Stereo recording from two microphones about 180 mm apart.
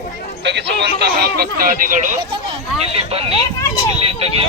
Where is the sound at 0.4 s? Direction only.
75° right (ahead or behind).